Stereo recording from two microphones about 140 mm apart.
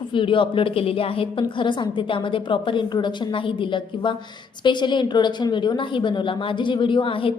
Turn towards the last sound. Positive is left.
turn(degrees=40)  # may be behind; listen again after turning